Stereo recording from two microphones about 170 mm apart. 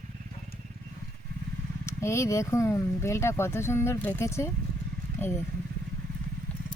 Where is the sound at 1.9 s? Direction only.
15° left (ahead or behind).